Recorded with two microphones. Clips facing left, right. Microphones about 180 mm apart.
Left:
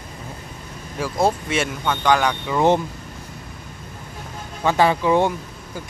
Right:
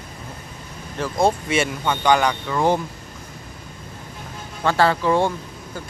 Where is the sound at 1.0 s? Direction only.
5° left (ahead or behind).